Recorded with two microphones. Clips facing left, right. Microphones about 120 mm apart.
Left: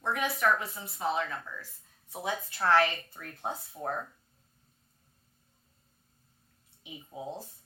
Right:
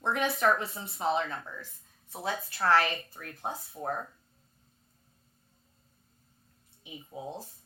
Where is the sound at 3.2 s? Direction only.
10° right (ahead or behind).